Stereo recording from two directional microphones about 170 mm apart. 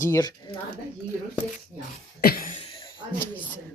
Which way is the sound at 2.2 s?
60° left (ahead or behind).